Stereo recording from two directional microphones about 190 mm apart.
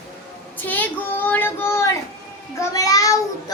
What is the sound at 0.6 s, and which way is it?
Child singing, 10° left (ahead or behind).